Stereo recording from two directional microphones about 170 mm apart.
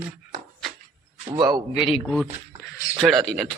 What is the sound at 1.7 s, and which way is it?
Speech, 30° left (ahead or behind).